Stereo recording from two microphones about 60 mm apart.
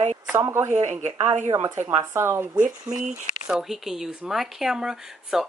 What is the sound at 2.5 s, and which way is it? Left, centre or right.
A woman's voice, centre.